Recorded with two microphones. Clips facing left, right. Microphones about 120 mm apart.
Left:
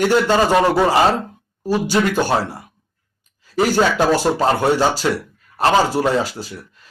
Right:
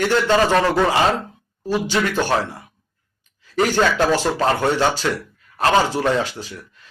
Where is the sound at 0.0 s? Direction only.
10° left (ahead or behind).